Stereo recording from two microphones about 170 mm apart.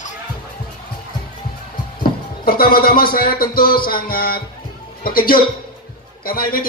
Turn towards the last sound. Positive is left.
turn(degrees=60)  # may be behind; listen again after turning